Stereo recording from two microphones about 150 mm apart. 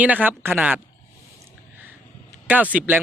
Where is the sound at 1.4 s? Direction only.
15° right (ahead or behind).